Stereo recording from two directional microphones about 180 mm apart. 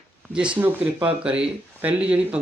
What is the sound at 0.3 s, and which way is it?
Speech, 5° right (ahead or behind).